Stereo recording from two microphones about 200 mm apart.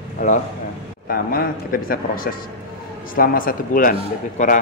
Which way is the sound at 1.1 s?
45° left (ahead or behind).